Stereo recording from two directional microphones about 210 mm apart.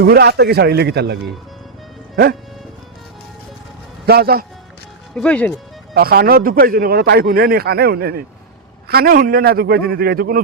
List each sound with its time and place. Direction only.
0.0 s a man's voice: 50° right (ahead or behind)
4.0 s a man's voice: 45° right (ahead or behind)
5.1 s speech: 5° left (ahead or behind)
5.9 s a man's voice: 45° right (ahead or behind)